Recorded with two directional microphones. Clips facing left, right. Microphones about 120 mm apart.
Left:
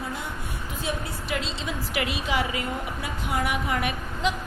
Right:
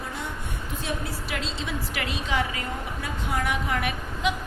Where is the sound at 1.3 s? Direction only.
5° left (ahead or behind).